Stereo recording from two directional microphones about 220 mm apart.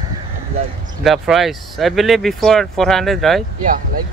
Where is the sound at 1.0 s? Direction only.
Centre (ahead or behind).